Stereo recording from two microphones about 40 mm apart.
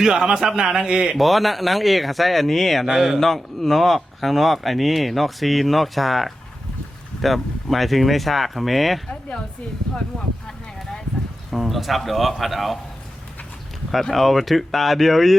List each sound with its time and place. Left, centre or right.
0.0 s a man's voice: centre
1.1 s speech: centre
2.8 s a man's voice: centre
3.2 s speech: centre
9.9 s speech: left
11.5 s speech: centre
14.1 s speech: centre